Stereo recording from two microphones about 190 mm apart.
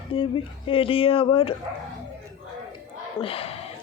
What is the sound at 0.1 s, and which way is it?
Speech, 25° left (ahead or behind).